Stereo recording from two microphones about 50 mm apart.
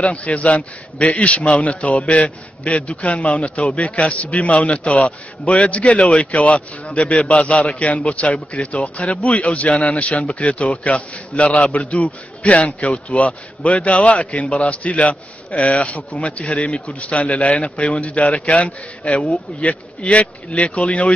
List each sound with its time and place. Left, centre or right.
0.0 s a man's voice: left